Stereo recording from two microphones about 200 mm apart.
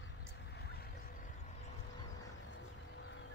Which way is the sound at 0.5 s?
50° left (ahead or behind).